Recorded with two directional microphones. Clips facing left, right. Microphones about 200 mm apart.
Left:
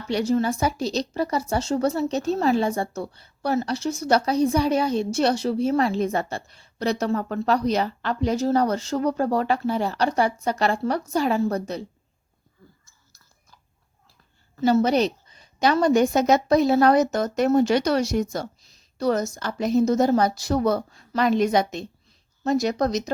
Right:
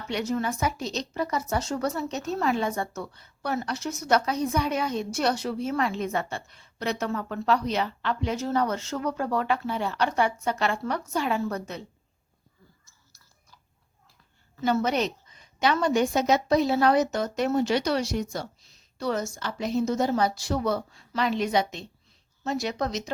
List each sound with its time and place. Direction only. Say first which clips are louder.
0.1 s a woman's voice: left 6 dB; 30° left (ahead or behind)
14.5 s a woman's voice: left 6 dB; 35° left (ahead or behind)